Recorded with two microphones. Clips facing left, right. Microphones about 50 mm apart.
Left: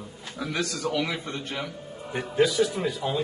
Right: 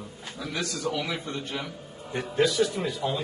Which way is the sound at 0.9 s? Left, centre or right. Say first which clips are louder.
Left 2 dB; left.